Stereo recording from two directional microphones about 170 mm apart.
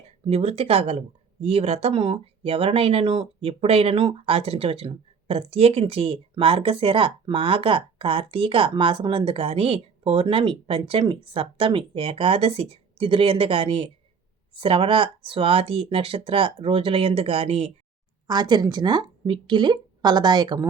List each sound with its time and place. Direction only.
0.3 s speech: 35° right (ahead or behind)
18.3 s a woman's voice: 25° right (ahead or behind)